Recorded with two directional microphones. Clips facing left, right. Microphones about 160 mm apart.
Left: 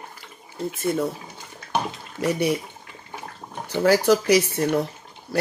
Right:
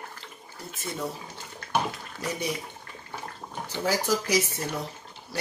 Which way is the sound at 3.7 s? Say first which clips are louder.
Left 9 dB; 70° left (ahead or behind).